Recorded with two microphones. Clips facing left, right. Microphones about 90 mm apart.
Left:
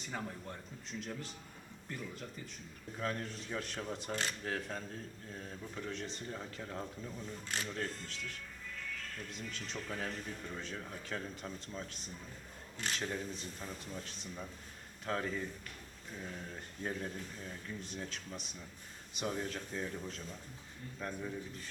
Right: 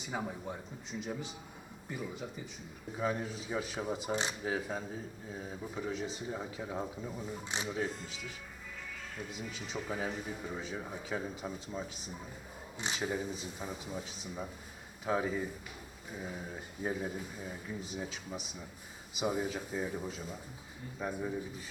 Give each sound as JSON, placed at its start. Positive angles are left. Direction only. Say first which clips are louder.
{"t": 0.0, "sound": "speech", "louder": "right 4 dB", "side_deg": -10}